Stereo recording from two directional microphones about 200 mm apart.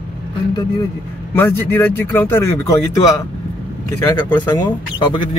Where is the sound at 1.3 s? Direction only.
10° left (ahead or behind).